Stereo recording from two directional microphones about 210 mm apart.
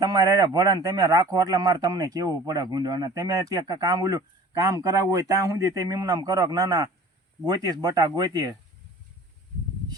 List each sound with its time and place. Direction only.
0.0 s a man's voice: 20° right (ahead or behind)